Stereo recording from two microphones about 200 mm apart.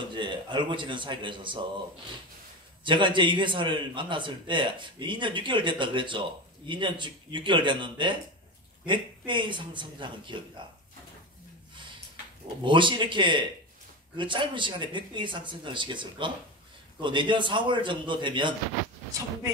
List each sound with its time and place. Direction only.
0.1 s a man's voice: 25° right (ahead or behind)
2.8 s a man's voice: 25° right (ahead or behind)
12.6 s a man's voice: 25° right (ahead or behind)